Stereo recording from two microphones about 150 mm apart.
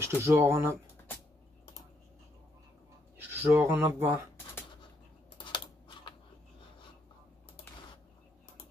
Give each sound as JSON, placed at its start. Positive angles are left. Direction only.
{"t": 0.0, "sound": "speech", "side_deg": -15}
{"t": 3.2, "sound": "speech", "side_deg": -15}
{"t": 5.4, "sound": "a sound", "side_deg": 30}